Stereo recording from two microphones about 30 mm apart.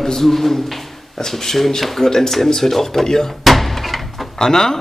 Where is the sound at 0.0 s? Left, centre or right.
Centre.